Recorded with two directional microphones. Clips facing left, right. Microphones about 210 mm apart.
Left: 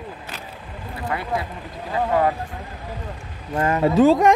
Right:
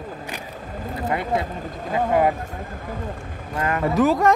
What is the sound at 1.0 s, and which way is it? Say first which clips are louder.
Speech: right 2 dB; 25° right (ahead or behind).